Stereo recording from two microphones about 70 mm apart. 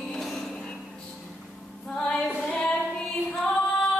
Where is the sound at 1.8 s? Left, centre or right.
Centre.